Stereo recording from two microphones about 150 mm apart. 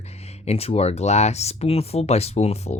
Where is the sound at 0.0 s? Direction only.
45° left (ahead or behind).